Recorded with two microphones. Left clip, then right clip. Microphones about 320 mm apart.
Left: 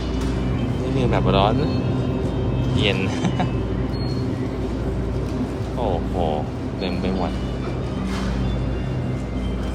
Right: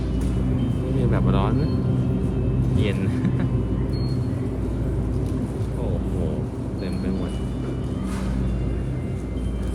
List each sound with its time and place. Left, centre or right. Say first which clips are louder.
1.1 s speech: left 9 dB; centre